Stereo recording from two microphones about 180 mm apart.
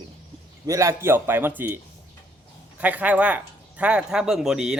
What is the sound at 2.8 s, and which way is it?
Speech, 10° right (ahead or behind).